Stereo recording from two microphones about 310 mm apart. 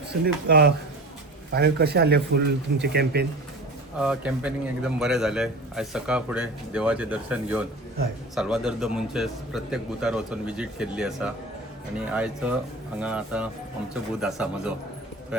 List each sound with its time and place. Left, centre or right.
0.1 s speech: right
4.0 s a man's voice: centre